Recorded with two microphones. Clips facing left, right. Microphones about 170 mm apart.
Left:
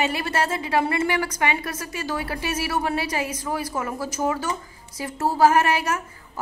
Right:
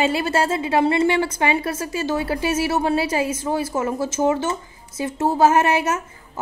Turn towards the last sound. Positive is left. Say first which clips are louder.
# right 3 dB
turn(degrees=-25)  # may be behind; listen again after turning